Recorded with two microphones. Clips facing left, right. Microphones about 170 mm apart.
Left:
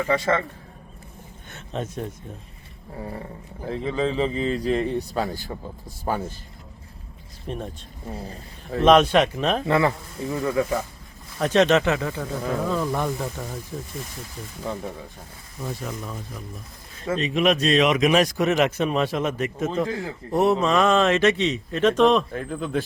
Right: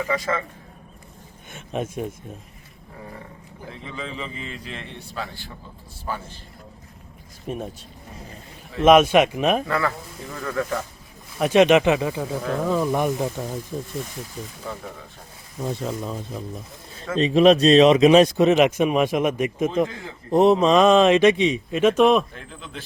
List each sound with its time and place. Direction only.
1.5 s speech: 10° right (ahead or behind)
3.7 s a man's voice: 35° left (ahead or behind)
7.4 s speech: 5° right (ahead or behind)
8.1 s a man's voice: 35° left (ahead or behind)
8.8 s speech: 10° right (ahead or behind)
9.6 s speech: 25° left (ahead or behind)
11.3 s speech: 10° right (ahead or behind)
15.6 s speech: 25° right (ahead or behind); by 22.3 s 10° right (ahead or behind)
22.3 s speech: 50° left (ahead or behind)